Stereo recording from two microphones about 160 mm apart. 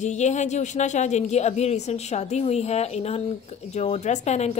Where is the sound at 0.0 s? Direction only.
45° left (ahead or behind).